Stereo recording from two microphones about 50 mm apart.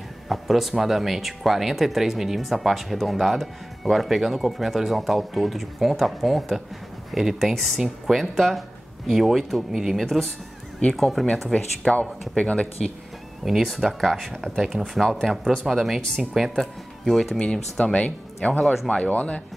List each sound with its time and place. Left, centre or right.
0.3 s speech: centre
9.9 s speech: centre
11.4 s speech: centre
13.4 s speech: centre
16.5 s speech: centre
17.4 s speech: centre
18.6 s speech: centre
19.0 s speech: left